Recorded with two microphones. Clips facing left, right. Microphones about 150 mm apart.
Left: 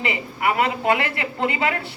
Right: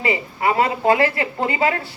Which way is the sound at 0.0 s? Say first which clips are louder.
Right 3 dB; 30° right (ahead or behind).